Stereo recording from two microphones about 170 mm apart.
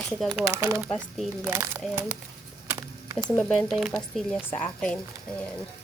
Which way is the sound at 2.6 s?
20° right (ahead or behind).